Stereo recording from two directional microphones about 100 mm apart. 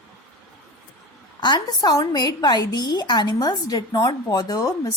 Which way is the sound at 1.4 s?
50° left (ahead or behind).